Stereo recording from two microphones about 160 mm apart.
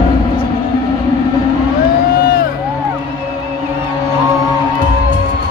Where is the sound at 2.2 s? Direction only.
65° left (ahead or behind).